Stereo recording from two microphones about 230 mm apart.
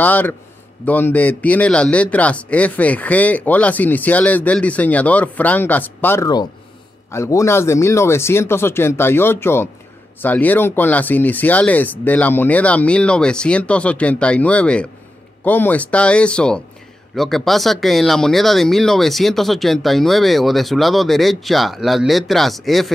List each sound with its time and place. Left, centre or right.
0.0 s a man's voice: centre